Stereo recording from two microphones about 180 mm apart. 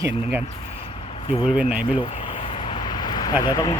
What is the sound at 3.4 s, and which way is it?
Speech, 20° left (ahead or behind).